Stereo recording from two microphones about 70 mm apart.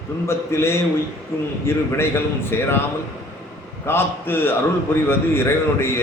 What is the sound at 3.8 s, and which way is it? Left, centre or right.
A man's voice, left.